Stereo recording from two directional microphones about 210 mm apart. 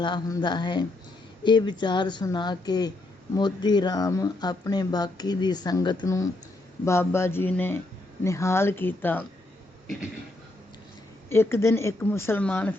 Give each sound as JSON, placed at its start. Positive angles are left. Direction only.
{"t": 0.0, "sound": "speech", "side_deg": 20}
{"t": 11.3, "sound": "speech", "side_deg": 10}